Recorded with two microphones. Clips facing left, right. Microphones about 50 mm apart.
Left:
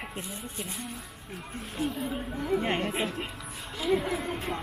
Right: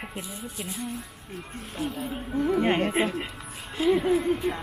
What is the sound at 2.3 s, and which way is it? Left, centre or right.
Speech, right.